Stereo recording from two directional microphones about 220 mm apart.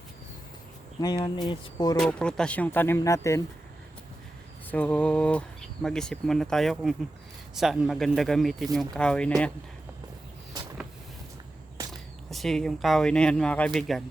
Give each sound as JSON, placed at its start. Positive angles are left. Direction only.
{"t": 1.0, "sound": "speech", "side_deg": 15}
{"t": 2.0, "sound": "speech", "side_deg": 5}
{"t": 4.7, "sound": "speech", "side_deg": 5}
{"t": 11.8, "sound": "a sound", "side_deg": -15}
{"t": 12.3, "sound": "speech", "side_deg": 0}